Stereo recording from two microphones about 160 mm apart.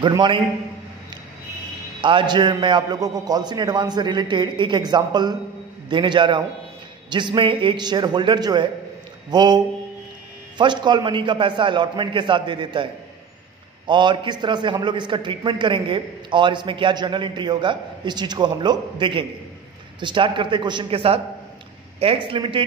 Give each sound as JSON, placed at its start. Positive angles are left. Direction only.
{"t": 0.0, "sound": "a man's voice", "side_deg": -30}
{"t": 2.0, "sound": "a man's voice", "side_deg": -30}
{"t": 10.6, "sound": "a man's voice", "side_deg": -30}
{"t": 13.8, "sound": "a man's voice", "side_deg": -30}